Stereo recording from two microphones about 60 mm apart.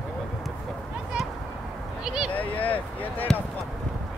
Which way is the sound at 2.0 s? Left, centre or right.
Centre.